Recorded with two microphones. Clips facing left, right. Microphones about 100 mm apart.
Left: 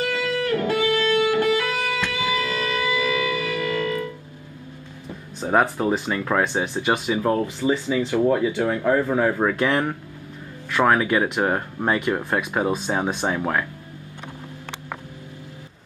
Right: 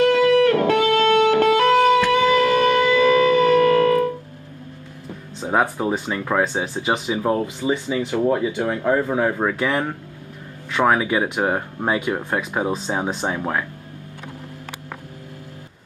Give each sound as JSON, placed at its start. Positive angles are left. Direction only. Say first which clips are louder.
{"t": 0.0, "sound": "music", "louder": "right 10 dB", "side_deg": -65}
{"t": 5.5, "sound": "speech", "louder": "even", "side_deg": -10}
{"t": 10.7, "sound": "speech", "louder": "even", "side_deg": -15}